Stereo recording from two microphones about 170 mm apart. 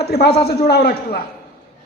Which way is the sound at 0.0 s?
70° left (ahead or behind).